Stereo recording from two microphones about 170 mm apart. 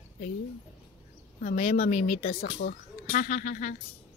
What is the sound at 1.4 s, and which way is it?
Speech, 50° left (ahead or behind).